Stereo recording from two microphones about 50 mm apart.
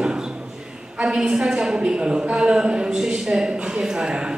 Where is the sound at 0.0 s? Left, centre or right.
Centre.